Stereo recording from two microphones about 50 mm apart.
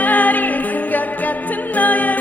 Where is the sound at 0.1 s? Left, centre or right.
Left.